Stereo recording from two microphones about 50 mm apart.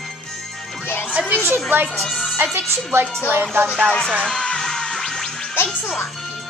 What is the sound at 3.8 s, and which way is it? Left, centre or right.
Speech, centre.